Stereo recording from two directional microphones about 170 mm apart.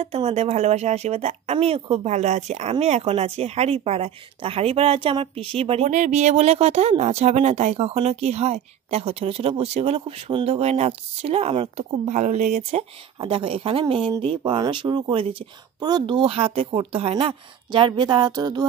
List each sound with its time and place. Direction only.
0.0 s speech: 35° right (ahead or behind)
13.2 s speech: 30° right (ahead or behind)